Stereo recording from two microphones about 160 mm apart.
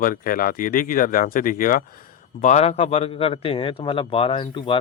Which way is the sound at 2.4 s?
45° left (ahead or behind).